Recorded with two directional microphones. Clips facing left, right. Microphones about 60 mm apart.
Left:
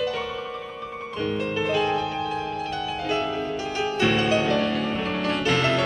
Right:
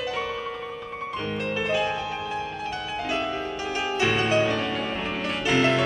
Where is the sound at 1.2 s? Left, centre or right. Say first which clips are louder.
Left 3 dB; centre.